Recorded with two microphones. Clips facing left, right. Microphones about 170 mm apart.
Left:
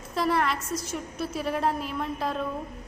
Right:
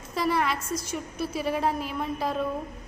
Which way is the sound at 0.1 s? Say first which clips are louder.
Even; centre (ahead or behind).